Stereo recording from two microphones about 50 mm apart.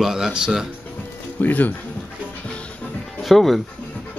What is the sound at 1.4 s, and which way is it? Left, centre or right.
Speech, left.